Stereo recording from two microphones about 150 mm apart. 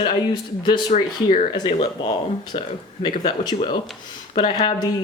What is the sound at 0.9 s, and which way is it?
Speech, 45° left (ahead or behind).